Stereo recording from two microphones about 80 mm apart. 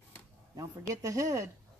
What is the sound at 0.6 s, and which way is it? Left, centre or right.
Speech, right.